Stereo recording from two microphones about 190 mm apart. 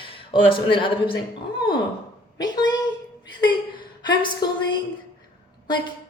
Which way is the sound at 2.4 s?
20° left (ahead or behind).